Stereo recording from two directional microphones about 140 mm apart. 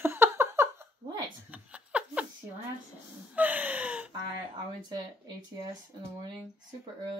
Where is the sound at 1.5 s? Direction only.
10° right (ahead or behind).